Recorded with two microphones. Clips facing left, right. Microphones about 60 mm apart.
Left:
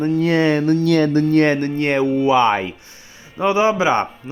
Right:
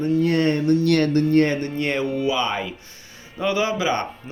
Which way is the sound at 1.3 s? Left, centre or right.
Left.